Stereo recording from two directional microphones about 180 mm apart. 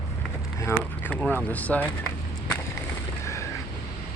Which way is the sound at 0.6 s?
10° left (ahead or behind).